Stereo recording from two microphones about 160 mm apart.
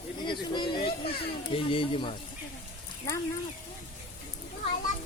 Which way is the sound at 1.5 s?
35° left (ahead or behind).